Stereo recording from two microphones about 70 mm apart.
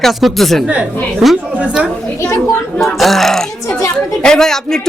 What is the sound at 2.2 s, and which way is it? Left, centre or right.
Speech, left.